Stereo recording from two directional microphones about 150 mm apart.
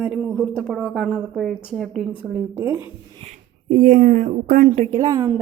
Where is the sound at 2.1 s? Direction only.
10° right (ahead or behind).